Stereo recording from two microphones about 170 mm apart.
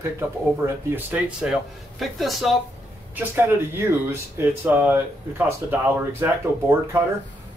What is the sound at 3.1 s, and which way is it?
Speech, 10° right (ahead or behind).